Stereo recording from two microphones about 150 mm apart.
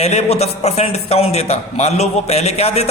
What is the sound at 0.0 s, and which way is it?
A man's voice, 45° left (ahead or behind).